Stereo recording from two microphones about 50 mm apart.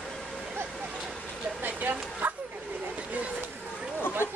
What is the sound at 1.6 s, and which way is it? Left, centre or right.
Bow-wow, right.